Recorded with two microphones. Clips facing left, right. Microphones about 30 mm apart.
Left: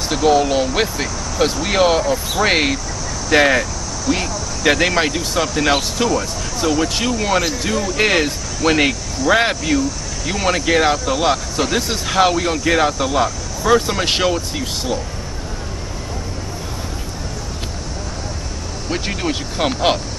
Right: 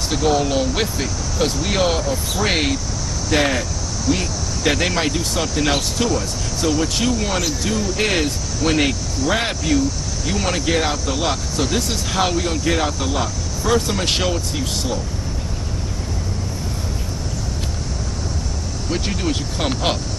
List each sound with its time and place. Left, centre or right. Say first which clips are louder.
0.1 s speech: left 4 dB; centre
18.9 s speech: left 1 dB; centre